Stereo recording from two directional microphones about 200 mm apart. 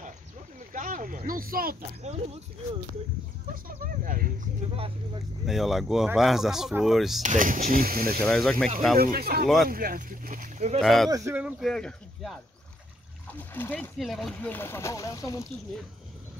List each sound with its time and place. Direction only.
0.7 s speech: 40° right (ahead or behind)
3.6 s speech: 45° right (ahead or behind)
4.7 s speech: 25° right (ahead or behind)
5.5 s speech: centre (ahead or behind)
7.2 s speech: 40° right (ahead or behind)
8.3 s speech: centre (ahead or behind)
8.9 s speech: 50° right (ahead or behind)
10.8 s speech: centre (ahead or behind)
11.1 s speech: 15° right (ahead or behind); by 15.4 s 15° left (ahead or behind)